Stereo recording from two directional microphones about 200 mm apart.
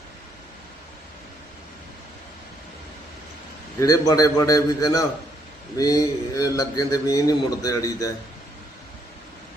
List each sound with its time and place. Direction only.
3.8 s a man's voice: 15° left (ahead or behind)